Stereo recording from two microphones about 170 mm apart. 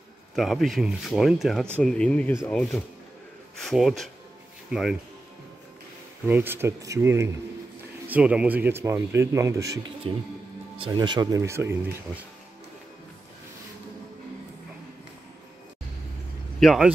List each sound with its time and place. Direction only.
0.4 s speech: centre (ahead or behind)
6.2 s speech: 10° right (ahead or behind)
10.1 s speech: 30° right (ahead or behind); by 12.3 s 10° right (ahead or behind)
16.5 s speech: centre (ahead or behind)